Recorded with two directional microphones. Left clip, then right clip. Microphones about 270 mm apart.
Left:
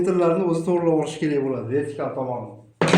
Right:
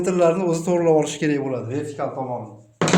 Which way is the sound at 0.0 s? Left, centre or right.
Right.